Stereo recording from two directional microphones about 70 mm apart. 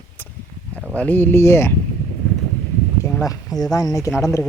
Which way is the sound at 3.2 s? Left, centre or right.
Left.